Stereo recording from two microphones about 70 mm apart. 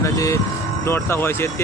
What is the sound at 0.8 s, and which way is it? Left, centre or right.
Speech, left.